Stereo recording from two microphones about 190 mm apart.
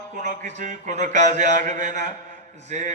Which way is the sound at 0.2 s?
40° right (ahead or behind).